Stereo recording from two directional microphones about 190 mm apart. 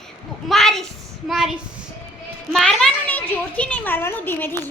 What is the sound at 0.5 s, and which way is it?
A woman's voice, centre (ahead or behind).